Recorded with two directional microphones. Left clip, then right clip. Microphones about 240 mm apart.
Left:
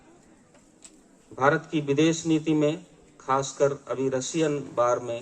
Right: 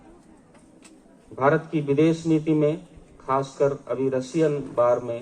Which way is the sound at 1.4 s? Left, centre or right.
Left.